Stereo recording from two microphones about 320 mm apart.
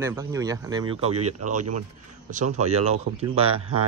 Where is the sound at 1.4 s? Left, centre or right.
Right.